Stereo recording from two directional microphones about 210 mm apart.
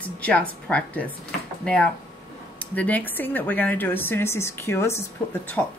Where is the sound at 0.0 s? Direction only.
5° left (ahead or behind).